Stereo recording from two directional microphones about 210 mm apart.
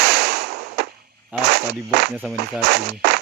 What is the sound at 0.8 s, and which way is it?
Cap gun, 50° right (ahead or behind).